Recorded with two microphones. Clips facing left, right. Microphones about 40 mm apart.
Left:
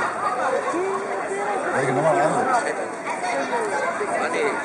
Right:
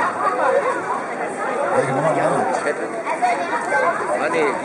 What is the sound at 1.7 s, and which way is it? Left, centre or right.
Chatter, centre.